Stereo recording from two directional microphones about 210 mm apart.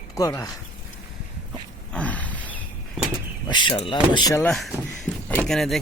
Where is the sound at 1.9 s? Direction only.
5° left (ahead or behind).